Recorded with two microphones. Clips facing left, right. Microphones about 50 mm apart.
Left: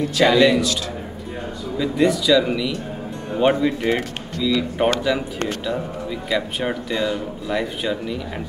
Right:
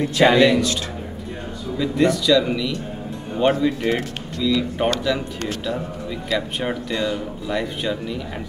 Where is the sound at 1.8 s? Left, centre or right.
Centre.